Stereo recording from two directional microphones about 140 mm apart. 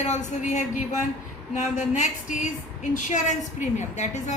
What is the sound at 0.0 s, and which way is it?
A woman's voice, 55° left (ahead or behind).